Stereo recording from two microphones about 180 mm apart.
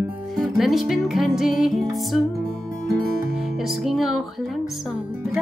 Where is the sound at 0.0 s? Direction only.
Centre (ahead or behind).